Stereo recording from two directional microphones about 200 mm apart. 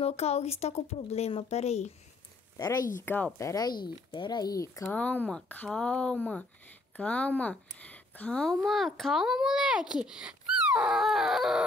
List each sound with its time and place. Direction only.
0.0 s speech: 30° left (ahead or behind)
3.0 s a woman's voice: 10° left (ahead or behind)